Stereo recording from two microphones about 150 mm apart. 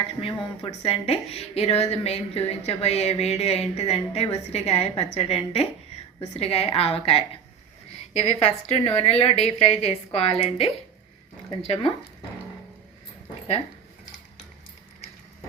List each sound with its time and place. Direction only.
0.2 s a woman's voice: 40° left (ahead or behind)